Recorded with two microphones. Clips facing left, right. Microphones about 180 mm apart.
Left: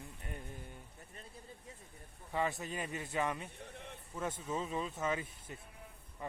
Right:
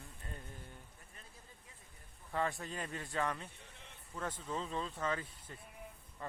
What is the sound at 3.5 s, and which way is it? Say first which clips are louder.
Speech: left 9 dB; 60° left (ahead or behind).